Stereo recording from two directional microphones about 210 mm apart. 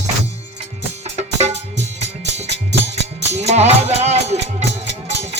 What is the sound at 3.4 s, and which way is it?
Music, 30° right (ahead or behind).